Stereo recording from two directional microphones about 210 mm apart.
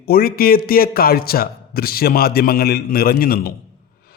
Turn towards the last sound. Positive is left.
turn(degrees=45)  # may be behind; listen again after turning